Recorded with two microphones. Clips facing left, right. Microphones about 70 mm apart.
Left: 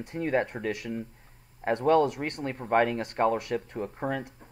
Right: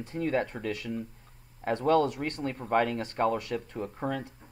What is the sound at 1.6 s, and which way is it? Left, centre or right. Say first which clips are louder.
Speech: left 2 dB; left.